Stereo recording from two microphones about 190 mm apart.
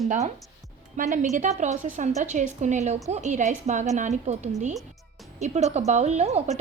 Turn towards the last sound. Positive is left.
turn(degrees=-35)  # may be behind; listen again after turning